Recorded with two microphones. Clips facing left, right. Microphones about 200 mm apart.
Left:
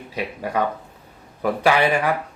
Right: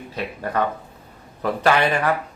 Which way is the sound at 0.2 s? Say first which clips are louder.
Even; 10° left (ahead or behind).